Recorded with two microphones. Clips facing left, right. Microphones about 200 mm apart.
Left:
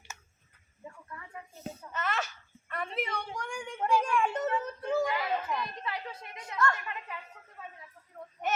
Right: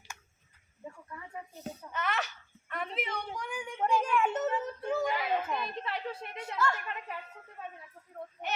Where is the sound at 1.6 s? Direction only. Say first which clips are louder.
Even; centre (ahead or behind).